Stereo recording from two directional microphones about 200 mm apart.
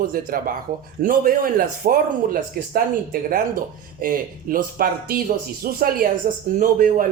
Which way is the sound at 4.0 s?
45° right (ahead or behind).